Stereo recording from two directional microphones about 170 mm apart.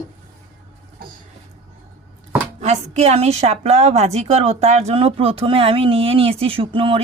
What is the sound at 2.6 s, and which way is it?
A woman's voice, 40° right (ahead or behind).